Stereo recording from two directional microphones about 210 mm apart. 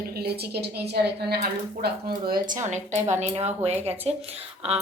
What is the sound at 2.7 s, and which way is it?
A woman's voice, 35° right (ahead or behind).